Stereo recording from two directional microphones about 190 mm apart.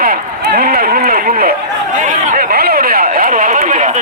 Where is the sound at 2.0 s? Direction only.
40° right (ahead or behind).